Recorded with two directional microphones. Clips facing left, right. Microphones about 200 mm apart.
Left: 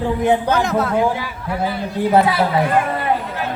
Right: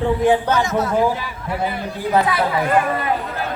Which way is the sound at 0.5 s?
60° left (ahead or behind).